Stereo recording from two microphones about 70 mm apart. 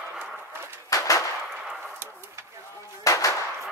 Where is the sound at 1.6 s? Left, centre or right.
Centre.